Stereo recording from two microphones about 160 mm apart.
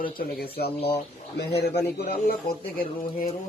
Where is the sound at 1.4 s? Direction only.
90° left.